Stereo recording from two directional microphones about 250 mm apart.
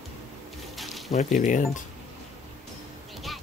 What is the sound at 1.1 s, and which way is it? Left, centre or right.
Speech, left.